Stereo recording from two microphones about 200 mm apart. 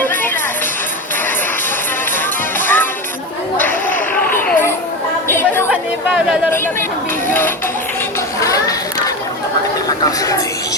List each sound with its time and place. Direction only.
0.0 s music: 10° left (ahead or behind)
2.6 s music: 10° left (ahead or behind)
3.6 s a sound: 10° left (ahead or behind)
5.3 s chatter: 10° left (ahead or behind)
5.7 s chatter: 5° right (ahead or behind)
7.3 s music: 10° left (ahead or behind)
8.4 s children playing: 15° left (ahead or behind)
10.0 s speech: 15° left (ahead or behind)